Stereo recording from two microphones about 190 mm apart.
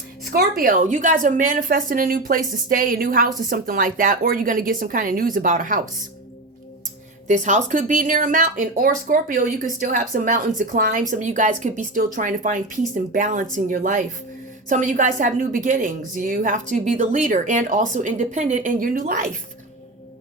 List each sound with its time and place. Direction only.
0.3 s a woman's voice: 50° right (ahead or behind)
7.3 s a woman's voice: 40° right (ahead or behind)